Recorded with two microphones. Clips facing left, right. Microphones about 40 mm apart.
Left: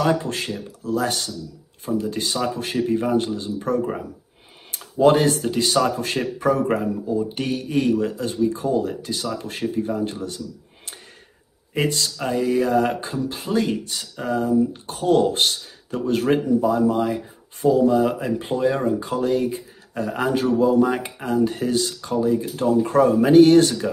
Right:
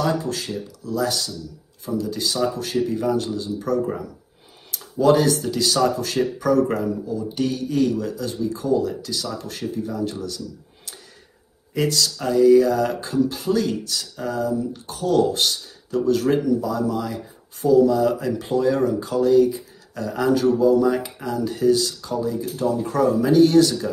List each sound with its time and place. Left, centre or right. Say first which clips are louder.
0.0 s speech: left 2 dB; left
11.7 s speech: right 1 dB; left